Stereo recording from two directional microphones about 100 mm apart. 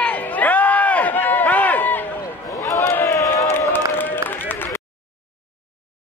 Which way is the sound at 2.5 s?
30° left (ahead or behind).